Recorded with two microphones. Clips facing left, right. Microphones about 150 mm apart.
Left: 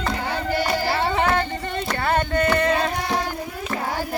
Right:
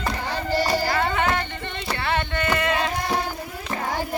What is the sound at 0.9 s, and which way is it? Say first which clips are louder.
Music: left 2 dB; 30° left (ahead or behind).